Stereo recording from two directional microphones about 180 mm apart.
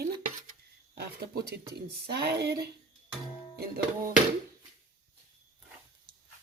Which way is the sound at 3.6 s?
50° right (ahead or behind).